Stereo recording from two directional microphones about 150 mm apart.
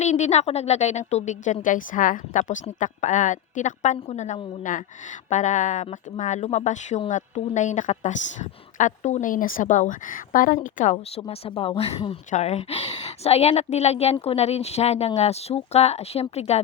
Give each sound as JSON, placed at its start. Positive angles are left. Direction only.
{"t": 0.0, "sound": "a woman's voice", "side_deg": 50}
{"t": 4.7, "sound": "a woman's voice", "side_deg": 60}
{"t": 10.9, "sound": "speech", "side_deg": 40}
{"t": 12.3, "sound": "a woman's voice", "side_deg": 45}